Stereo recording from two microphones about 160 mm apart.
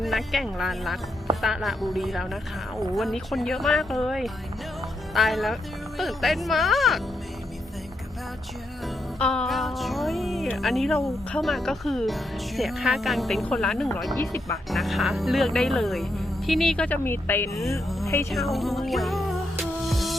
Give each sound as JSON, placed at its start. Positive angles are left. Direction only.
{"t": 0.0, "sound": "speech", "side_deg": 0}
{"t": 9.1, "sound": "speech", "side_deg": 5}
{"t": 14.2, "sound": "speech", "side_deg": 20}
{"t": 14.7, "sound": "speech", "side_deg": 0}
{"t": 17.5, "sound": "music", "side_deg": 0}
{"t": 18.3, "sound": "speech", "side_deg": 0}
{"t": 19.9, "sound": "music", "side_deg": 0}